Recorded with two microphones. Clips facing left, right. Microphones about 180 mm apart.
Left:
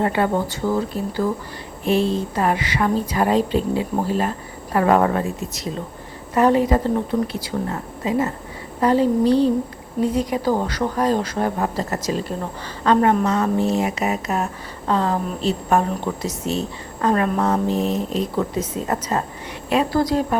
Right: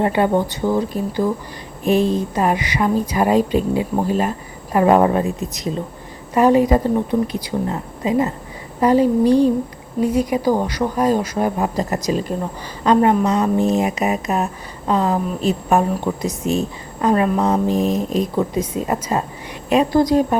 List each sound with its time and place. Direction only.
0.0 s a woman's voice: 20° right (ahead or behind)